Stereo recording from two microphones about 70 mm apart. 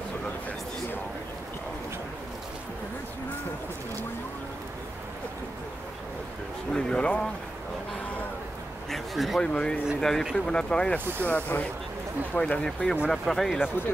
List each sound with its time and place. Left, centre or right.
6.7 s speech: centre
8.9 s speech: centre
9.4 s speech: centre
11.2 s speech: left
12.4 s speech: centre